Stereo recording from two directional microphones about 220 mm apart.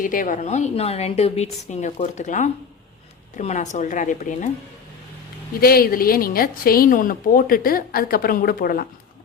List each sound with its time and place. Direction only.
0.0 s a woman's voice: 40° left (ahead or behind)
5.5 s a woman's voice: 40° left (ahead or behind)